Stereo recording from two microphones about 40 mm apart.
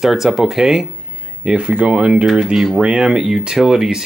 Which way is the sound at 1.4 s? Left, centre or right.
Right.